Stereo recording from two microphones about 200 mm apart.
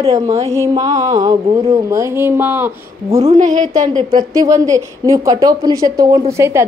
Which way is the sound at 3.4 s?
40° right (ahead or behind).